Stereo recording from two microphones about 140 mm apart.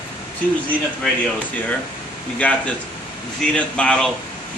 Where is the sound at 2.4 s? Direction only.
10° left (ahead or behind).